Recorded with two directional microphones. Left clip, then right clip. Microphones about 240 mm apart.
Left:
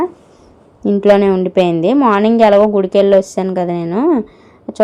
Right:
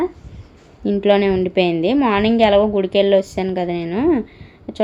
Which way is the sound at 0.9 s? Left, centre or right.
Left.